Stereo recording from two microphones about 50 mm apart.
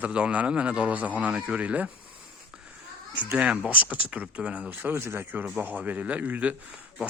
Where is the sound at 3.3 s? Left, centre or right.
Centre.